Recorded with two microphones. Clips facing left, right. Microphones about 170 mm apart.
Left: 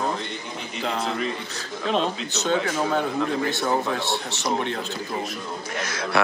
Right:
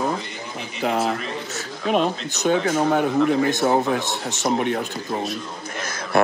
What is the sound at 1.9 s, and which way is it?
Speech, 10° right (ahead or behind).